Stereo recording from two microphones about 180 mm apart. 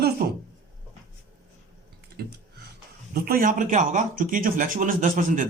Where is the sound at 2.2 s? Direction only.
60° right (ahead or behind).